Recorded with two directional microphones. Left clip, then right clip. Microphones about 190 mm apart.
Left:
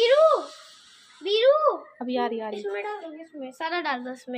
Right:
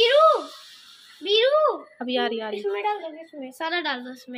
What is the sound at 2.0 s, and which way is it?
Speech, centre (ahead or behind).